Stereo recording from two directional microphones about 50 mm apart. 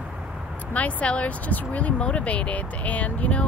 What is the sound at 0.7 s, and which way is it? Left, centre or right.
Speech, left.